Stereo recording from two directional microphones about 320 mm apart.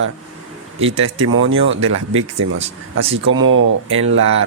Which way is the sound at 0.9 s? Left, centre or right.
Right.